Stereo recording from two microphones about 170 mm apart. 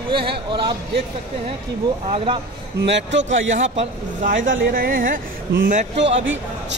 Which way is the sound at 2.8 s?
90° right.